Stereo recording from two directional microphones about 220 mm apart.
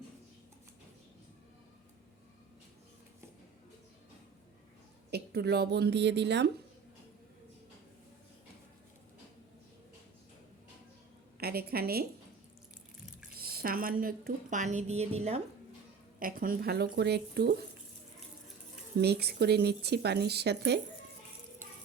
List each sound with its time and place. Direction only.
5.1 s speech: 45° right (ahead or behind)
11.3 s a woman's voice: 45° right (ahead or behind)
13.3 s a woman's voice: 45° right (ahead or behind)
16.2 s speech: 40° right (ahead or behind)
18.9 s speech: 45° right (ahead or behind)